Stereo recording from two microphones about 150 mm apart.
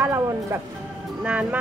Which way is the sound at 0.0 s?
20° right (ahead or behind).